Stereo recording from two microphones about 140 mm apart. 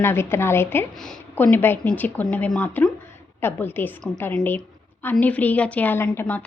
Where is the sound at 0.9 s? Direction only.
5° left (ahead or behind).